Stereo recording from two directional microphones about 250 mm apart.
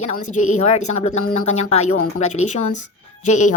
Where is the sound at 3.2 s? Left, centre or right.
Left.